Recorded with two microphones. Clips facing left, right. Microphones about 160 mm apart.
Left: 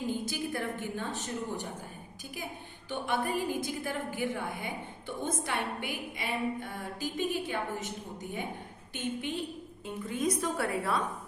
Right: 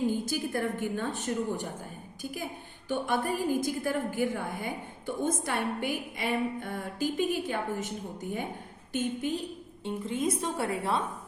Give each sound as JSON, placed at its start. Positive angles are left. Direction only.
{"t": 0.1, "sound": "a woman's voice", "side_deg": -45}
{"t": 2.9, "sound": "a woman's voice", "side_deg": -45}
{"t": 9.8, "sound": "a woman's voice", "side_deg": -25}